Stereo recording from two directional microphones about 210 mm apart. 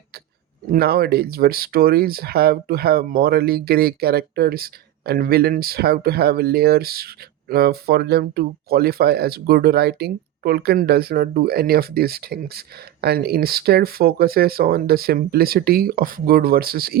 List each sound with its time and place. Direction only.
0.7 s speech: 45° right (ahead or behind)